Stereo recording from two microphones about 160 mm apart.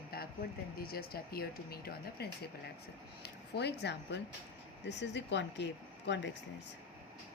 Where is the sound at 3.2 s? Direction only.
90° left.